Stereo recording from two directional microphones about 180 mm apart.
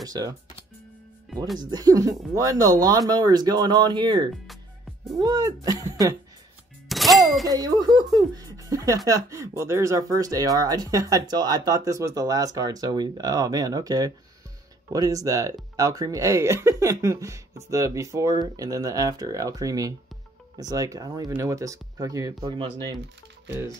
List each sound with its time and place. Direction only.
0.0 s speech: 20° right (ahead or behind)
1.7 s speech: 20° right (ahead or behind)
6.9 s music: centre (ahead or behind)
7.4 s speech: 20° right (ahead or behind)